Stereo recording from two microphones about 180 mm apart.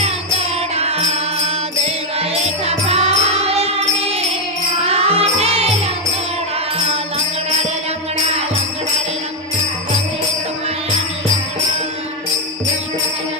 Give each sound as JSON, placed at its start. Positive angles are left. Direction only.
{"t": 0.0, "sound": "music", "side_deg": -35}